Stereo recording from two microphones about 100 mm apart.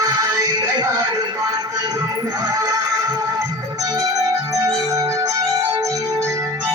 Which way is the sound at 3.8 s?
35° right (ahead or behind).